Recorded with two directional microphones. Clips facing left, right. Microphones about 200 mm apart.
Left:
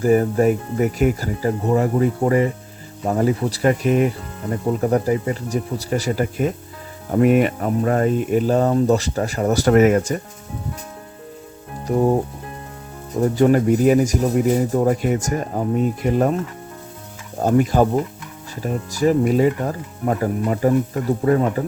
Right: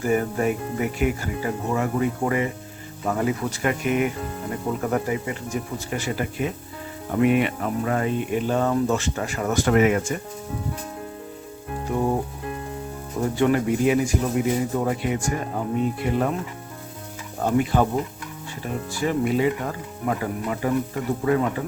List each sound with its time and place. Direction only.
0.0 s speech: 35° left (ahead or behind)
11.9 s speech: 40° left (ahead or behind)
13.3 s speech: 40° left (ahead or behind)
17.4 s speech: 40° left (ahead or behind)